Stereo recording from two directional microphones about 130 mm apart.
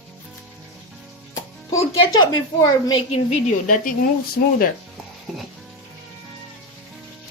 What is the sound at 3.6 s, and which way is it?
Speech, 90° left.